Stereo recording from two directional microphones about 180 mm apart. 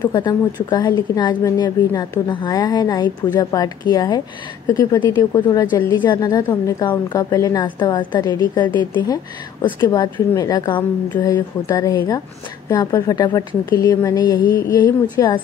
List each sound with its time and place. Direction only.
0.0 s a woman's voice: 20° left (ahead or behind)